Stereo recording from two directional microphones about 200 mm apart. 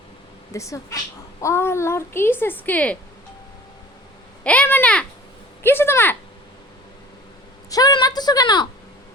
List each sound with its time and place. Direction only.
0.5 s a woman's voice: 15° left (ahead or behind)
4.4 s a woman's voice: 5° left (ahead or behind)
7.7 s a sound: 20° left (ahead or behind)